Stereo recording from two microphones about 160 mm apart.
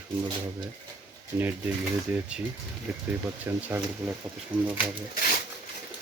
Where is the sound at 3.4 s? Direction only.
10° right (ahead or behind).